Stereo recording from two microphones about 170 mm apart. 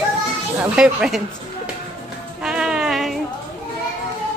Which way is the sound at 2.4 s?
5° right (ahead or behind).